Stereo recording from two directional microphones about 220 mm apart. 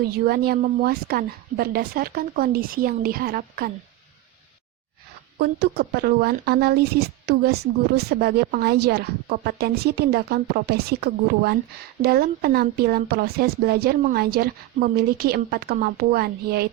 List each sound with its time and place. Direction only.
0.3 s speech: 45° right (ahead or behind)
5.4 s speech: 45° right (ahead or behind)